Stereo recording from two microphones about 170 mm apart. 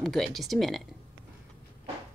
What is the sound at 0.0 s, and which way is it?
Speech, centre (ahead or behind).